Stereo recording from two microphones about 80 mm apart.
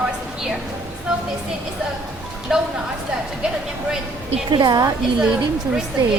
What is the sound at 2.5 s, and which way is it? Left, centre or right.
Speech, centre.